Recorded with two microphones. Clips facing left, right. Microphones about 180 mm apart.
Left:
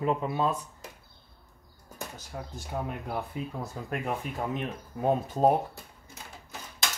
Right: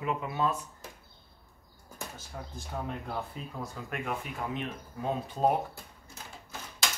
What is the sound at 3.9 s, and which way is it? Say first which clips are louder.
Speech: left 4 dB; 35° left (ahead or behind).